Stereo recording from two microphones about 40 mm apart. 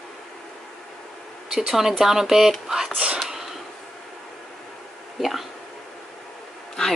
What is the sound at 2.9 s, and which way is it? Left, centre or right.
Speech, right.